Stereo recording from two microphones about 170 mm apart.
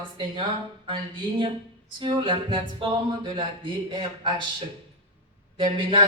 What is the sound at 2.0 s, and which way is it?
Speech, 30° right (ahead or behind).